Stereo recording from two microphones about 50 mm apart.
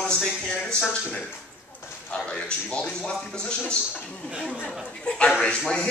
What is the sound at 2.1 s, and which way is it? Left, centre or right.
A man's voice, left.